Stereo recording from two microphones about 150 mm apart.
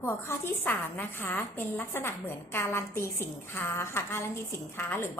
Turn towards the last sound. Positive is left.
turn(degrees=15)  # may be behind; listen again after turning